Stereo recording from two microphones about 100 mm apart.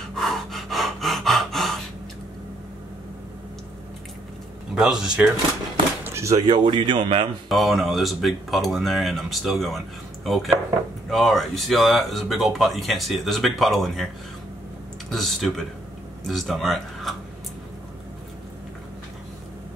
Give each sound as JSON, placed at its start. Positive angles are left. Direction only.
{"t": 0.1, "sound": "gasp", "side_deg": 0}
{"t": 4.7, "sound": "speech", "side_deg": -5}
{"t": 6.0, "sound": "a sound", "side_deg": -30}
{"t": 6.4, "sound": "speech", "side_deg": -50}
{"t": 7.4, "sound": "speech", "side_deg": 0}
{"t": 15.0, "sound": "speech", "side_deg": 0}